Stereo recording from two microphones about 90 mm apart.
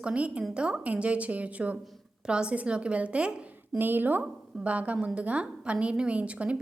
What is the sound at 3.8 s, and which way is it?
A woman's voice, 20° right (ahead or behind).